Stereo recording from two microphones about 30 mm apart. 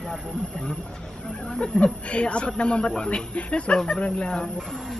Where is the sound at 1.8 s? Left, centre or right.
Left.